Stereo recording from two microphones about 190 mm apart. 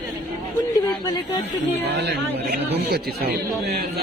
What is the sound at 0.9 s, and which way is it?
Speech, 20° left (ahead or behind).